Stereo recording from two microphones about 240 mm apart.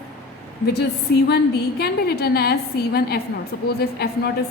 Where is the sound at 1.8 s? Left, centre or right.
Left.